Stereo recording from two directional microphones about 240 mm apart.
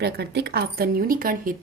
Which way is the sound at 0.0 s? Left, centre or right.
Right.